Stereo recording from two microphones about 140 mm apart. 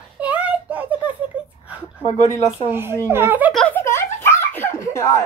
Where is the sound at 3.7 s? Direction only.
20° left (ahead or behind).